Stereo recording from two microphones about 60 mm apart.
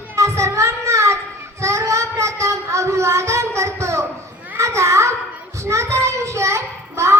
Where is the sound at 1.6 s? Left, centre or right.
Right.